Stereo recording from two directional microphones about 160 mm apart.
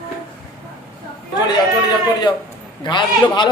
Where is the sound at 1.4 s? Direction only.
25° left (ahead or behind).